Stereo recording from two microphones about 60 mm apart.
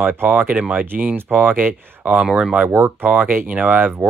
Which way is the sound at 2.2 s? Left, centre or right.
Centre.